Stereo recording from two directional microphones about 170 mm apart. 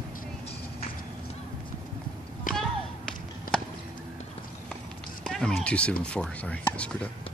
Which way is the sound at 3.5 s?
55° left (ahead or behind).